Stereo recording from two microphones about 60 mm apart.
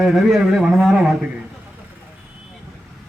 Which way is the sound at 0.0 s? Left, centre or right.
Centre.